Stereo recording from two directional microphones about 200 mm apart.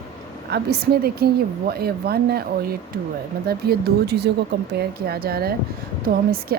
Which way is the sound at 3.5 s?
55° right (ahead or behind).